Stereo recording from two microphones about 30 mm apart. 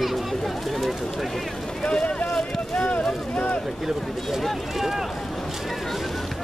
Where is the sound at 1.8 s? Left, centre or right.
Left.